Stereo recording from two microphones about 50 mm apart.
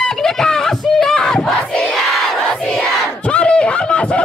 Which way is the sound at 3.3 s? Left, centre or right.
Left.